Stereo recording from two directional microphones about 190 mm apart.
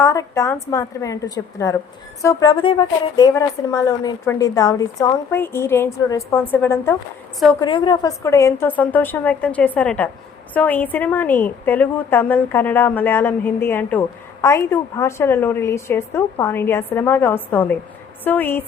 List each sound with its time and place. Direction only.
0.0 s a woman's voice: 15° left (ahead or behind)
7.6 s a woman's voice: 25° left (ahead or behind)